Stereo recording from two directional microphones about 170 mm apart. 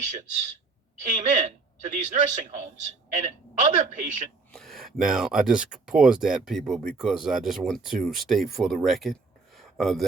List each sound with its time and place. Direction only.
0.0 s a woman's voice: 45° right (ahead or behind)
4.5 s speech: centre (ahead or behind)
9.6 s a sound: centre (ahead or behind)